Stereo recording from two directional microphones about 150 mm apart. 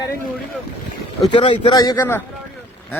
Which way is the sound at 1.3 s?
35° left (ahead or behind).